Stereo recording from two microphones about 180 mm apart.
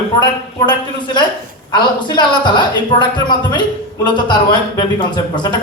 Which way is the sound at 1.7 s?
25° left (ahead or behind).